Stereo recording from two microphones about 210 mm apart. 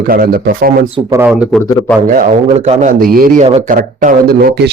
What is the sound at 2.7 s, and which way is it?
Speech, 40° right (ahead or behind).